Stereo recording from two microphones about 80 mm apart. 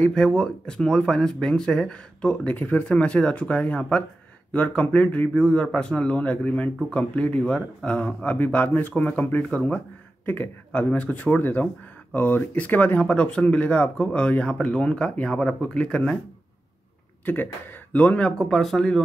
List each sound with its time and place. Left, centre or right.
0.0 s speech: centre
17.2 s speech: left; by 19.0 s centre